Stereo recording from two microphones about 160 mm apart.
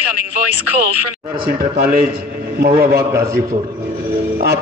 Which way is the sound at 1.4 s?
75° right (ahead or behind).